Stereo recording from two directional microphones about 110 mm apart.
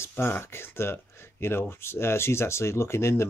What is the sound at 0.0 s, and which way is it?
Speech, 20° left (ahead or behind).